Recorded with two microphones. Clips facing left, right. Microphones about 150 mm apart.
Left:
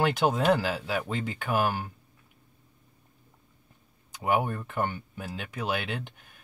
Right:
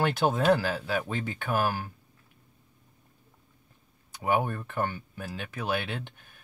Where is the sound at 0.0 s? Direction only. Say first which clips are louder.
Even; 15° left (ahead or behind).